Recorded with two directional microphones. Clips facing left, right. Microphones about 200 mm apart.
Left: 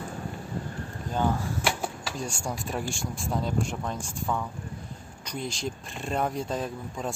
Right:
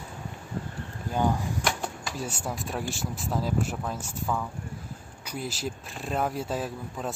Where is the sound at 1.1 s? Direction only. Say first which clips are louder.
Right 1 dB; 15° right (ahead or behind).